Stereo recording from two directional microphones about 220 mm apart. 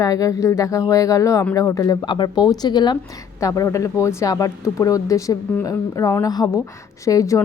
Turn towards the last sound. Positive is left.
turn(degrees=15)  # may be behind; listen again after turning